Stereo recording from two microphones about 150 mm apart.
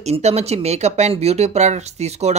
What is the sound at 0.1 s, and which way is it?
Speech, 45° right (ahead or behind).